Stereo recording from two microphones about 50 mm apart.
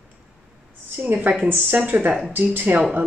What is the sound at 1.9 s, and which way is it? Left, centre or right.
Speech, right.